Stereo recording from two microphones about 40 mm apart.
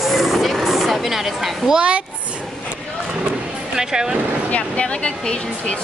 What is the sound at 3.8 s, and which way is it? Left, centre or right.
Speech, centre.